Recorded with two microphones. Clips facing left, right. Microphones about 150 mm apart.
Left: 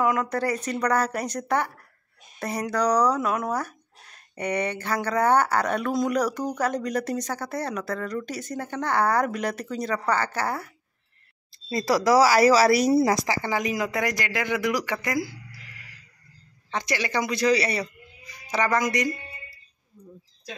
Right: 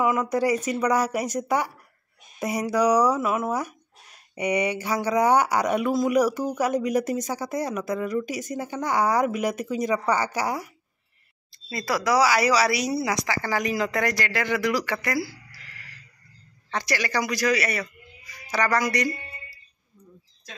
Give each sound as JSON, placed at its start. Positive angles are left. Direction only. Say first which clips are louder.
{"t": 0.0, "sound": "speech", "louder": "right 2 dB", "side_deg": -5}
{"t": 11.5, "sound": "speech", "louder": "left 4 dB", "side_deg": 35}
{"t": 13.3, "sound": "a man's voice", "louder": "even", "side_deg": 20}